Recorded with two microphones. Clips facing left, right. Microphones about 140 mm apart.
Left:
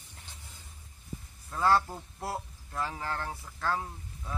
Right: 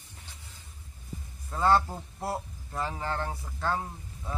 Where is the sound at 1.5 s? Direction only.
20° right (ahead or behind).